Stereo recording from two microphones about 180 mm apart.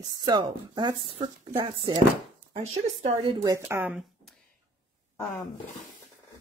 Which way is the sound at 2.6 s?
35° right (ahead or behind).